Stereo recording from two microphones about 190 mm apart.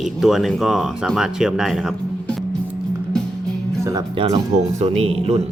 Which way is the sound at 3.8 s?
20° right (ahead or behind).